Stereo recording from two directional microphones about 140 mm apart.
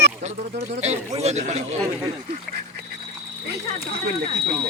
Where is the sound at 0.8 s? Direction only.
50° right (ahead or behind).